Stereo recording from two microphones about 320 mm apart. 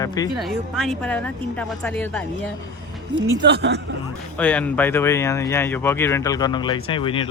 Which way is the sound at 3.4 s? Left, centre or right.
Right.